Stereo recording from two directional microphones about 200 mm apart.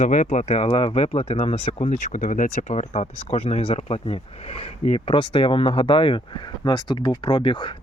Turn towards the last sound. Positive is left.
turn(degrees=25)  # may be behind; listen again after turning